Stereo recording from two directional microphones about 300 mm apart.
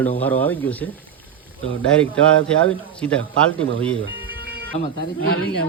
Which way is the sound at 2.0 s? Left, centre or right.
Centre.